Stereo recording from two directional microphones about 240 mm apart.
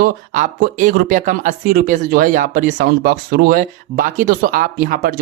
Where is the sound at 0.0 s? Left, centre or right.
Right.